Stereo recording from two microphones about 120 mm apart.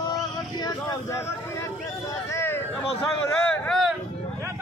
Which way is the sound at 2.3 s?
20° left (ahead or behind).